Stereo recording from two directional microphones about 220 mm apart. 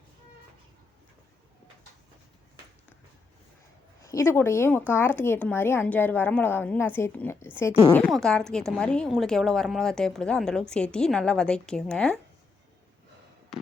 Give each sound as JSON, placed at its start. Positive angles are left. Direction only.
{"t": 4.0, "sound": "a woman's voice", "side_deg": 15}